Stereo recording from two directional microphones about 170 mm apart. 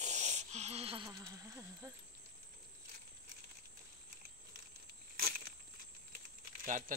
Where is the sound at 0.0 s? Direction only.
45° right (ahead or behind).